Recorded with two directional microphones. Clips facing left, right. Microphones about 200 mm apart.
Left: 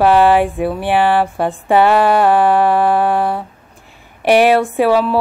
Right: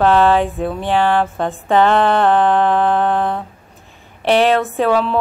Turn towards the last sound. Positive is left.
turn(degrees=5)  # may be behind; listen again after turning